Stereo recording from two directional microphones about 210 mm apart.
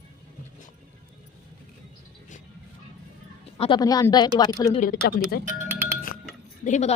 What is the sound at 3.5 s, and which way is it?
A woman's voice, 20° left (ahead or behind).